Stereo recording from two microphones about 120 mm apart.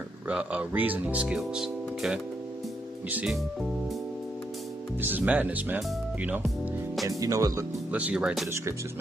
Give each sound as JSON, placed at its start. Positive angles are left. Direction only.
{"t": 0.3, "sound": "speech", "side_deg": -10}
{"t": 5.0, "sound": "speech", "side_deg": -15}
{"t": 7.1, "sound": "speech", "side_deg": -25}
{"t": 7.9, "sound": "speech", "side_deg": -10}